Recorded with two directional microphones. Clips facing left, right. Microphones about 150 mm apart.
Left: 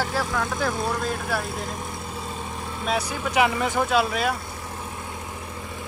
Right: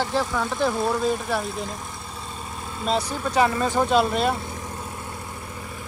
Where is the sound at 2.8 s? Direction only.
10° left (ahead or behind).